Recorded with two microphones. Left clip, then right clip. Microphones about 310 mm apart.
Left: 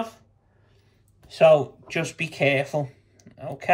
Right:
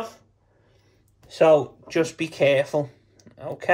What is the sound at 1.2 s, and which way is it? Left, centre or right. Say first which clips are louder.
Speech: left 1 dB; right.